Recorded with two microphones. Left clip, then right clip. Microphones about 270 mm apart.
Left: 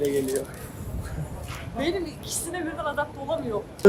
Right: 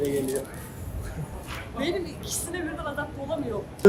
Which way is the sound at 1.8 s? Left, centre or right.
Centre.